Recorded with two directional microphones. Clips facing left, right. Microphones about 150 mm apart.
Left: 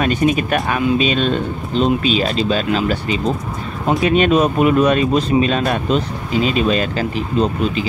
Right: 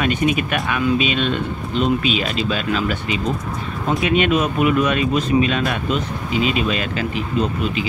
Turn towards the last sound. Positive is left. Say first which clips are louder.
# left 3 dB
turn(degrees=35)  # may be behind; listen again after turning